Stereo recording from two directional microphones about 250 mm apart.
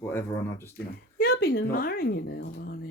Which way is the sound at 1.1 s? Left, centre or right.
Left.